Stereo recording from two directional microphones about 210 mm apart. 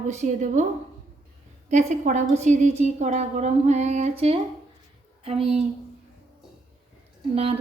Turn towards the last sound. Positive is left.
turn(degrees=-30)  # may be behind; listen again after turning